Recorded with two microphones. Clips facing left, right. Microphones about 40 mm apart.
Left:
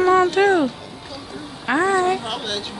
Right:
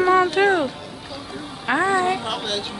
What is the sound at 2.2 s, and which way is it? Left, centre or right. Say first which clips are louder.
Speech: right 1 dB; centre.